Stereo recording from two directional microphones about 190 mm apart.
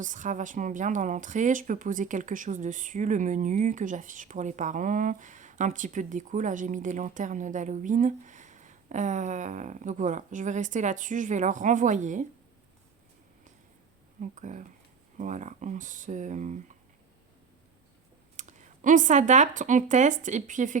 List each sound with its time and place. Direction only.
0.0 s a woman's voice: 40° right (ahead or behind)
14.2 s a woman's voice: 40° right (ahead or behind)
18.3 s speech: 40° right (ahead or behind)